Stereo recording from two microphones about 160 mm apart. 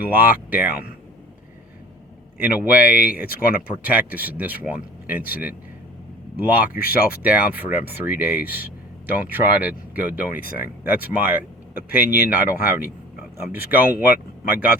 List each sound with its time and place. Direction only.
0.1 s speech: 10° right (ahead or behind)
2.4 s speech: 10° right (ahead or behind)
11.7 s speech: 65° left (ahead or behind)
12.3 s speech: 10° right (ahead or behind)